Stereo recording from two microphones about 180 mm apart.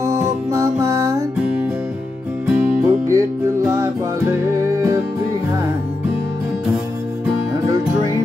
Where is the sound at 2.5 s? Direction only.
5° right (ahead or behind).